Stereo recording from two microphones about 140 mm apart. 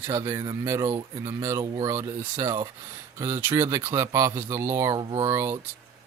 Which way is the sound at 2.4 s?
30° right (ahead or behind).